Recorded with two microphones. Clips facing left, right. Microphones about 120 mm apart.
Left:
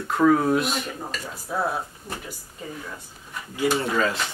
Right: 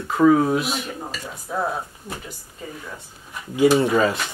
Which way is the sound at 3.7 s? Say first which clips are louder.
Right 6 dB; 15° right (ahead or behind).